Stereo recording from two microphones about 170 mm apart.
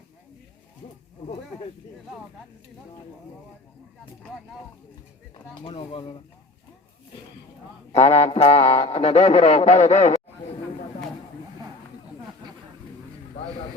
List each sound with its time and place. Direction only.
5.3 s a man's voice: 35° left (ahead or behind)
7.9 s a man's voice: 40° left (ahead or behind)